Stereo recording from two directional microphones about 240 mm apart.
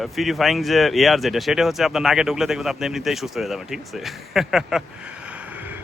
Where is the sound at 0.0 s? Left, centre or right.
Centre.